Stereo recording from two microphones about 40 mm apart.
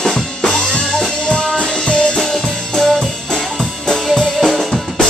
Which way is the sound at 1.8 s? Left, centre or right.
Left.